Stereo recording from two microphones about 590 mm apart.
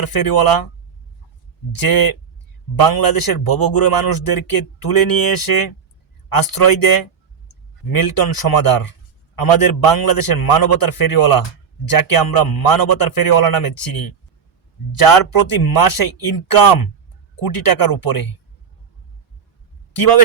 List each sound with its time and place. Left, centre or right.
0.0 s a man's voice: left
1.8 s a man's voice: left